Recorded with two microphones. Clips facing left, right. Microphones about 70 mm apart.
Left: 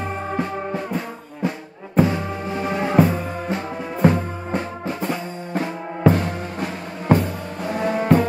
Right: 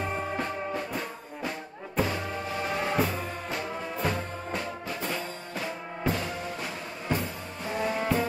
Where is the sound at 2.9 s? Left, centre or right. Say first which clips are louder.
Left 10 dB; left.